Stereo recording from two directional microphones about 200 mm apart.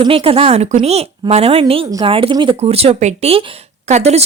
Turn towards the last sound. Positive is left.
turn(degrees=-35)  # may be behind; listen again after turning